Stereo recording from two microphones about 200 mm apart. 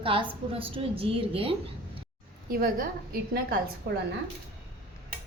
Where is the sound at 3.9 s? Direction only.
55° right (ahead or behind).